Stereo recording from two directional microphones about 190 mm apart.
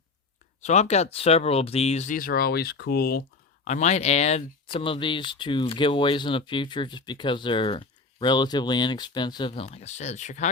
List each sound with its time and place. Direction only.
0.6 s speech: 35° left (ahead or behind); by 3.2 s 55° left (ahead or behind)
3.6 s speech: 40° left (ahead or behind)